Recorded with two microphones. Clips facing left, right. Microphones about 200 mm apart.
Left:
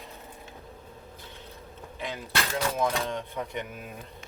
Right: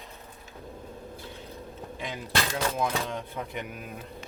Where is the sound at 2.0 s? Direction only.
15° right (ahead or behind).